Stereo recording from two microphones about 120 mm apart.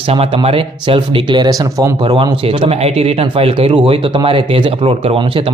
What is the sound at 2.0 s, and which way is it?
Speech, 45° right (ahead or behind).